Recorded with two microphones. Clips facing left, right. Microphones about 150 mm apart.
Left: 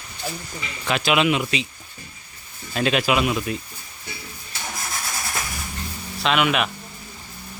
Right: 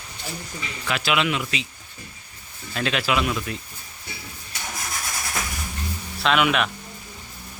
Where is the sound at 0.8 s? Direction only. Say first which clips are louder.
Left 4 dB; 20° left (ahead or behind).